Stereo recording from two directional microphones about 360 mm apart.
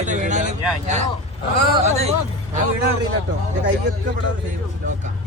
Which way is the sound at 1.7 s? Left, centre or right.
Centre.